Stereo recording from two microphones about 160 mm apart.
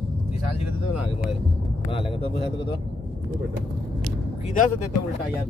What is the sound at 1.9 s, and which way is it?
Speech, 35° left (ahead or behind).